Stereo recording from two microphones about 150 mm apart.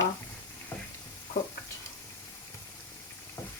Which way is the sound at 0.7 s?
15° left (ahead or behind).